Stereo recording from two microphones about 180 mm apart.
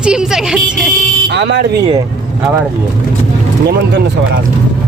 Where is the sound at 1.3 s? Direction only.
75° right (ahead or behind).